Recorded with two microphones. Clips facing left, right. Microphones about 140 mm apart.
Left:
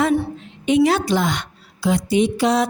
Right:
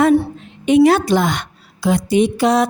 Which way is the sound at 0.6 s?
50° right (ahead or behind).